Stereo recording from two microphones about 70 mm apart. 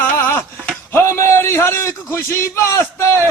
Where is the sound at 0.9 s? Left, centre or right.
Left.